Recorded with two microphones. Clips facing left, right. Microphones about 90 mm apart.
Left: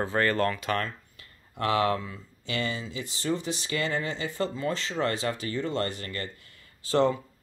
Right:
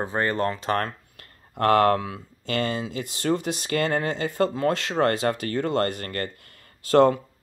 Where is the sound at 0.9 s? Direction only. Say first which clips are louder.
Right 2 dB; 50° right (ahead or behind).